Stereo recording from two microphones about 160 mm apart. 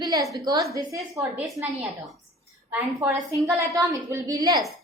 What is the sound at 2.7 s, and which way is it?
A woman's voice, 15° right (ahead or behind).